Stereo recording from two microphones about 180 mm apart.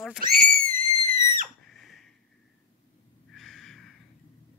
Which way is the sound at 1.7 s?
Centre (ahead or behind).